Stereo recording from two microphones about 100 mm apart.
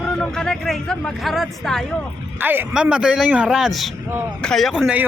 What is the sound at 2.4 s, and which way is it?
Speech, 20° right (ahead or behind).